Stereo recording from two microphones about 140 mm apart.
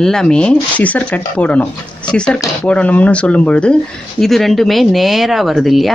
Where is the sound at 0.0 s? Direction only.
5° left (ahead or behind).